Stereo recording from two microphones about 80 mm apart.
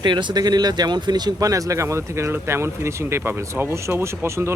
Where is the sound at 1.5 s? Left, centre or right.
Right.